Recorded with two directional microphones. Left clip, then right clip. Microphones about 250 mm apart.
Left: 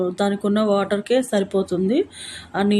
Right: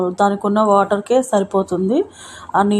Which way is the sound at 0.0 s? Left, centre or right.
Centre.